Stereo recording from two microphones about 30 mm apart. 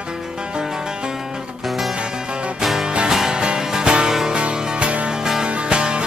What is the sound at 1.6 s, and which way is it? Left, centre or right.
Music, centre.